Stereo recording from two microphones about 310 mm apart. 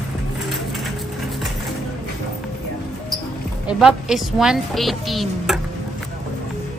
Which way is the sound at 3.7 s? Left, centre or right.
Centre.